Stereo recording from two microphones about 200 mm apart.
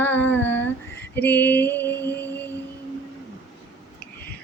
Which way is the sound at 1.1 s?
10° left (ahead or behind).